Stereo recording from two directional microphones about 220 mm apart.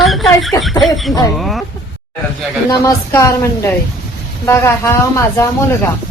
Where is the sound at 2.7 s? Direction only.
15° left (ahead or behind).